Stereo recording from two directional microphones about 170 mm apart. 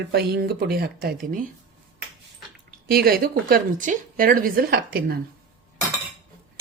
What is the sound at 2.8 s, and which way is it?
Speech, 65° right (ahead or behind).